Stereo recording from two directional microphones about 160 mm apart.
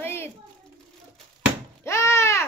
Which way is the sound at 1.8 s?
15° left (ahead or behind).